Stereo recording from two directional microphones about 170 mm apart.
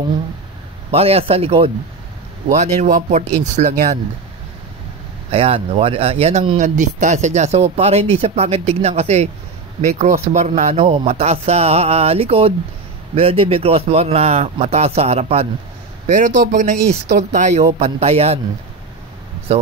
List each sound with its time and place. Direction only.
0.9 s a man's voice: 35° right (ahead or behind)
2.5 s speech: 45° right (ahead or behind)
5.3 s a man's voice: 35° right (ahead or behind)
6.6 s a man's voice: 45° right (ahead or behind)
16.1 s a man's voice: 50° right (ahead or behind)